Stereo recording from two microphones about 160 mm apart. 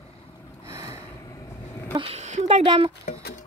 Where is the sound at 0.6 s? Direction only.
20° right (ahead or behind).